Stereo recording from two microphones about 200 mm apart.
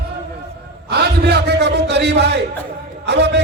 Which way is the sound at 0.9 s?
55° right (ahead or behind).